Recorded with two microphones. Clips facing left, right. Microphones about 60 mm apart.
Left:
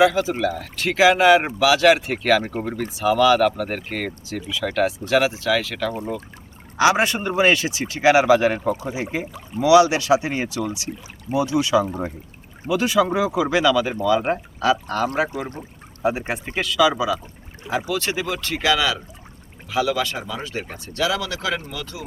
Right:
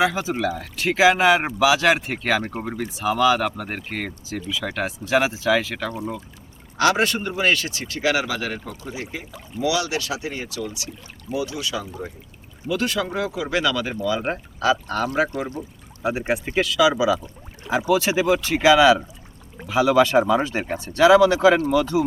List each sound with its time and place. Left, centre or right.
0.0 s speech: centre
6.7 s speech: centre
11.9 s speech: left
12.6 s speech: centre
16.2 s speech: centre; by 22.0 s right